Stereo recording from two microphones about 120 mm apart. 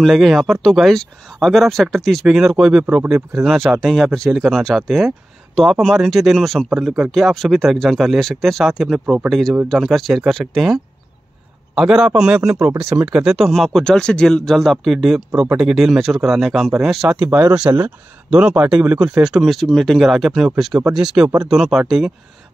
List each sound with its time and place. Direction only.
0.0 s speech: centre (ahead or behind)
17.3 s speech: 25° right (ahead or behind)
17.6 s speech: 10° right (ahead or behind)